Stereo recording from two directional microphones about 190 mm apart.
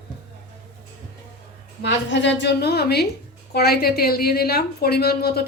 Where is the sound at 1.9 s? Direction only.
65° left (ahead or behind).